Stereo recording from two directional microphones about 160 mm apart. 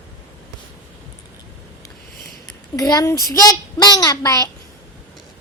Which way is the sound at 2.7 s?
20° left (ahead or behind).